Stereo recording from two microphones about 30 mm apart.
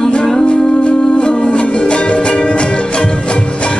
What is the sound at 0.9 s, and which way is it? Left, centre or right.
Music, left.